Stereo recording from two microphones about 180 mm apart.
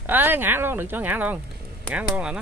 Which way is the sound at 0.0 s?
10° right (ahead or behind).